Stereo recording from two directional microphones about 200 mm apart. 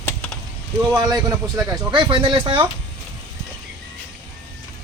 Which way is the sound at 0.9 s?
20° right (ahead or behind).